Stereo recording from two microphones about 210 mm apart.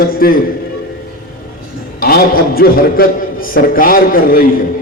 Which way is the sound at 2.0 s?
45° left (ahead or behind).